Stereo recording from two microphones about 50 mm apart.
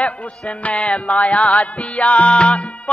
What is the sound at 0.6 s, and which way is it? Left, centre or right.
Mantra, left.